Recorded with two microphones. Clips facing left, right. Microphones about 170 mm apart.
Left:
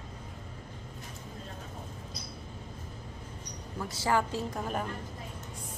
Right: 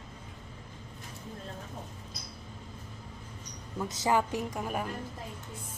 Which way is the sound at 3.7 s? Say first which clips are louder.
Right 1 dB; 20° right (ahead or behind).